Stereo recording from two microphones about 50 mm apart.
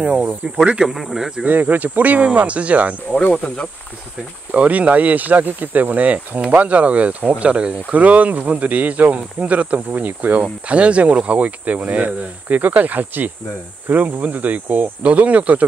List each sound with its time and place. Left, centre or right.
0.0 s speech: right
0.8 s speech: centre
1.4 s speech: right
3.3 s speech: left
4.6 s speech: right